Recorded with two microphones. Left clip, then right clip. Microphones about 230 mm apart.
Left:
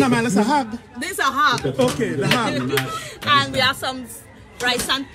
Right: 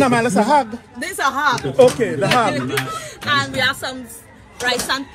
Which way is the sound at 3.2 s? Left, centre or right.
Left.